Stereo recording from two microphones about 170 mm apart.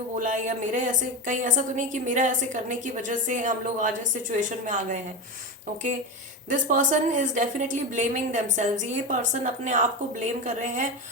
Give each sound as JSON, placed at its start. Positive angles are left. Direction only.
{"t": 0.2, "sound": "a woman's voice", "side_deg": -45}
{"t": 6.5, "sound": "a woman's voice", "side_deg": -50}